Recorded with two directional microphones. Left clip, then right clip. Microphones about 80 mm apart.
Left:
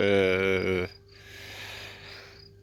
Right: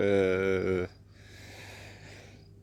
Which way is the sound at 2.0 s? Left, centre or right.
Right.